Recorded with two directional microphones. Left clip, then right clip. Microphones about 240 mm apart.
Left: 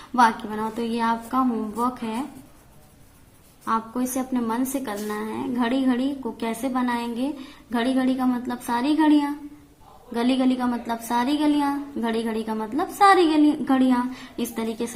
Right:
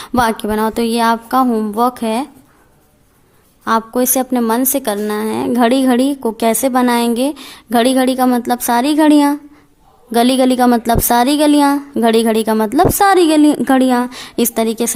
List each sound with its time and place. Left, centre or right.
0.0 s a woman's voice: right
3.6 s a woman's voice: right